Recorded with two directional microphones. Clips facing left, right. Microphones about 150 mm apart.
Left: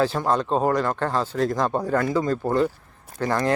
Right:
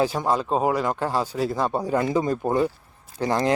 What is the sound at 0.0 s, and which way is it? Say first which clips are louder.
Speech: left 1 dB; 10° right (ahead or behind).